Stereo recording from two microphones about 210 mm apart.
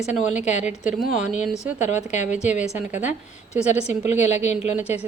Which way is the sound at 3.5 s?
30° left (ahead or behind).